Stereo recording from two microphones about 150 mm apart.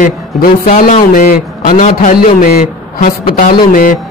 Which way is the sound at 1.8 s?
60° left (ahead or behind).